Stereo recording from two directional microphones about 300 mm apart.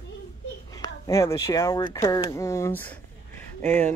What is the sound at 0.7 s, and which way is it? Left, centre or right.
Speech, centre.